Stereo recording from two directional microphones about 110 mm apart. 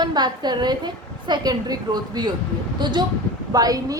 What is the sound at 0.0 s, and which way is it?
A woman's voice, 40° right (ahead or behind).